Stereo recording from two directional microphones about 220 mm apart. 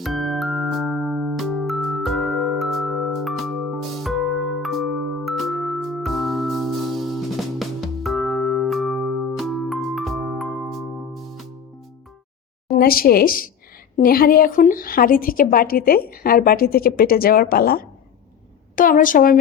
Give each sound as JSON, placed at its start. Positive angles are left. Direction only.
{"t": 0.0, "sound": "music", "side_deg": 0}
{"t": 12.8, "sound": "a woman's voice", "side_deg": 45}